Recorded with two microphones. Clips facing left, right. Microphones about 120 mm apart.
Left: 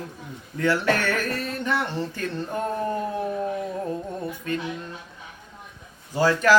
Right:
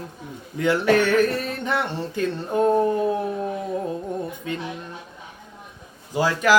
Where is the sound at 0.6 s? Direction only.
15° right (ahead or behind).